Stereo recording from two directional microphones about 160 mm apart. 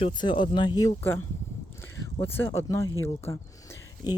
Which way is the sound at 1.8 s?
15° left (ahead or behind).